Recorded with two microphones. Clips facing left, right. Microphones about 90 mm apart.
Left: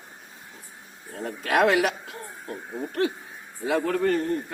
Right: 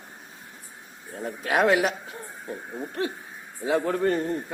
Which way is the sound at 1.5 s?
80° left.